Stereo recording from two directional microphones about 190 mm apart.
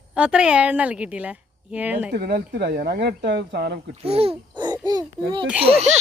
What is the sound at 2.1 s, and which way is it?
Speech, 55° right (ahead or behind).